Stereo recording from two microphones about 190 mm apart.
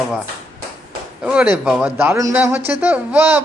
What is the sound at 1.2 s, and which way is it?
Speech, 5° right (ahead or behind).